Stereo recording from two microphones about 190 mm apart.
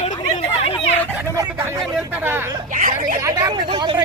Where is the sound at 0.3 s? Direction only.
35° left (ahead or behind).